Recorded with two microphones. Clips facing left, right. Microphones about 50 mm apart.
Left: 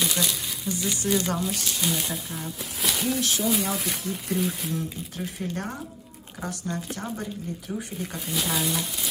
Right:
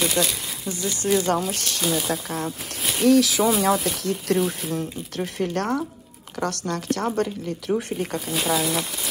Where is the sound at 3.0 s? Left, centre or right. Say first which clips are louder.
Right 11 dB; right.